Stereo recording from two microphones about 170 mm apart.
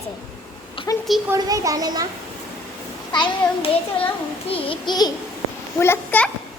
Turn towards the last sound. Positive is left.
turn(degrees=10)  # may be behind; listen again after turning